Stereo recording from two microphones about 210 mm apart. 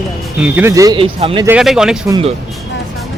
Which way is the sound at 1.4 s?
5° right (ahead or behind).